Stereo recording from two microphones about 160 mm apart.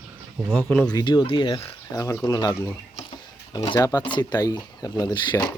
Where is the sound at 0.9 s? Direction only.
25° left (ahead or behind).